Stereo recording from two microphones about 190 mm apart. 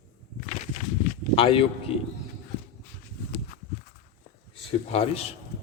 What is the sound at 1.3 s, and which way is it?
Speech, 30° left (ahead or behind).